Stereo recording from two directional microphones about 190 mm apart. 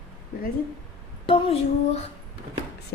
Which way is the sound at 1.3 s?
35° left (ahead or behind).